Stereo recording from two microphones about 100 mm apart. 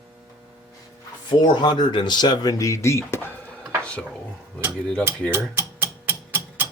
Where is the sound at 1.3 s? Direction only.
50° left (ahead or behind); by 3.3 s 25° left (ahead or behind).